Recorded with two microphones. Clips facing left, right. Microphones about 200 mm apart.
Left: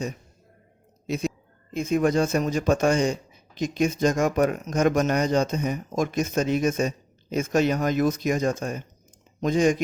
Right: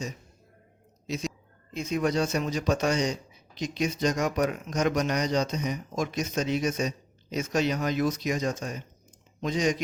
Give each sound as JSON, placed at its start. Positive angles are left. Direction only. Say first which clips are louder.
{"t": 1.0, "sound": "speech", "louder": "left 5 dB", "side_deg": 55}